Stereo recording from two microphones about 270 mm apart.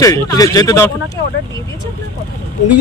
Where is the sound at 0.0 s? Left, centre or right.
Centre.